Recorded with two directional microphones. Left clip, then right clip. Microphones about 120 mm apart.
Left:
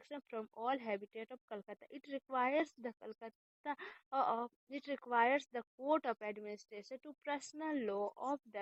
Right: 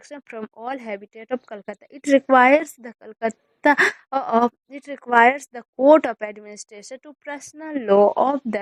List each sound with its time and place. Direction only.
0.1 s speech: 25° right (ahead or behind)